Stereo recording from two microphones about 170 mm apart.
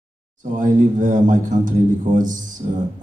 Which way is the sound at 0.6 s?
50° right (ahead or behind).